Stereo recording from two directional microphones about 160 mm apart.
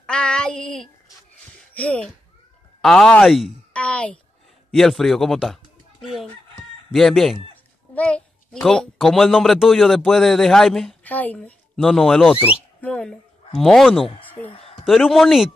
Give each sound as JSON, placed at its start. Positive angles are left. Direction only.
{"t": 0.0, "sound": "child singing", "side_deg": 5}
{"t": 1.7, "sound": "a child's voice", "side_deg": 10}